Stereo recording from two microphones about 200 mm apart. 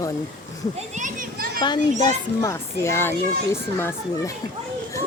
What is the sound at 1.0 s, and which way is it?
Children playing, 40° right (ahead or behind).